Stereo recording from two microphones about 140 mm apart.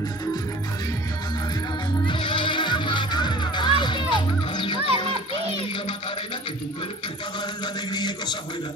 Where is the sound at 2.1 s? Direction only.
35° left (ahead or behind).